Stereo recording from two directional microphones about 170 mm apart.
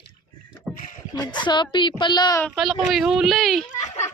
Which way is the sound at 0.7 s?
50° left (ahead or behind).